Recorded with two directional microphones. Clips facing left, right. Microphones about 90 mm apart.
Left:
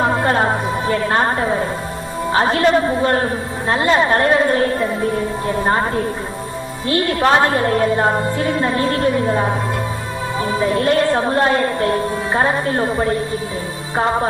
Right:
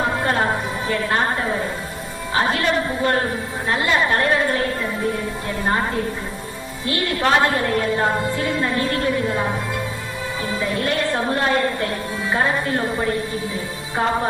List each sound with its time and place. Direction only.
0.9 s a woman's voice: 30° left (ahead or behind)
2.5 s a woman's voice: 30° left (ahead or behind)
6.8 s a woman's voice: 30° left (ahead or behind)
10.6 s a woman's voice: 30° left (ahead or behind)